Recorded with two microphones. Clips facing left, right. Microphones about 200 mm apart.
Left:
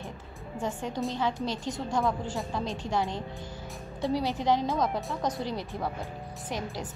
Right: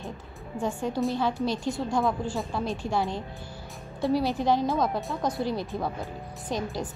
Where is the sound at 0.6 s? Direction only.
10° right (ahead or behind).